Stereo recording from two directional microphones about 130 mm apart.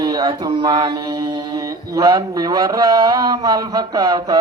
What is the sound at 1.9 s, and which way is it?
A man's voice, 25° right (ahead or behind).